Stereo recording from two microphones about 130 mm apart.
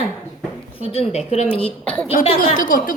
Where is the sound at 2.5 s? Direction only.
90° left.